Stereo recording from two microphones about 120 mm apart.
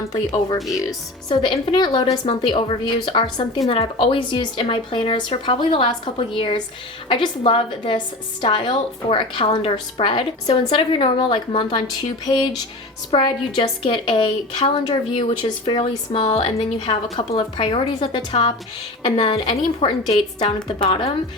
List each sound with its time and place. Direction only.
0.0 s speech: 30° left (ahead or behind)
0.6 s speech: centre (ahead or behind)
0.9 s a woman's voice: 40° left (ahead or behind)
16.6 s a woman's voice: 55° left (ahead or behind)